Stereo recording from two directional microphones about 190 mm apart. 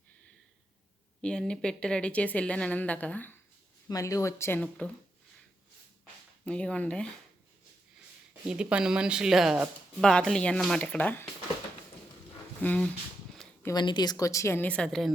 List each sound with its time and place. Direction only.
1.2 s speech: 5° left (ahead or behind)
6.4 s speech: 5° left (ahead or behind)
8.4 s speech: 5° right (ahead or behind)
12.6 s speech: 5° left (ahead or behind)
13.3 s zipper: 5° left (ahead or behind)
13.7 s speech: 20° left (ahead or behind); by 15.1 s 5° left (ahead or behind)